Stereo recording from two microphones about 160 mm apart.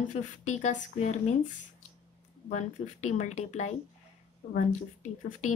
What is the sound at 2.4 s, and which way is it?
A woman's voice, 50° left (ahead or behind).